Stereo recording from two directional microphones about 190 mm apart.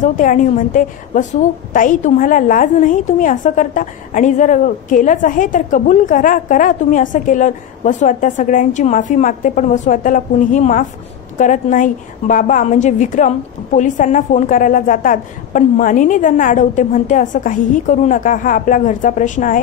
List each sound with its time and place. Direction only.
0.0 s a woman's voice: 45° left (ahead or behind)